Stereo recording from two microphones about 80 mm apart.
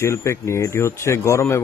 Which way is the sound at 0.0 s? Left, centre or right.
Left.